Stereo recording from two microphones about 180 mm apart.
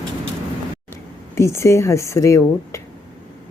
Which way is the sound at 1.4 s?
15° left (ahead or behind).